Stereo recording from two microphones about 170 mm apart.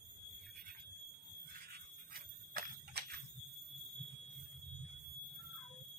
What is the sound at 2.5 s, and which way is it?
Fire alarm, 60° right (ahead or behind).